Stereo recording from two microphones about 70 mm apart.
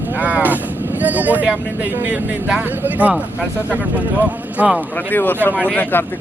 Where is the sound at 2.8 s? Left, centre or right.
Right.